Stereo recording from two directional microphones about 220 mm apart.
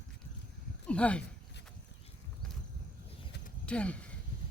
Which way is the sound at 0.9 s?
5° left (ahead or behind).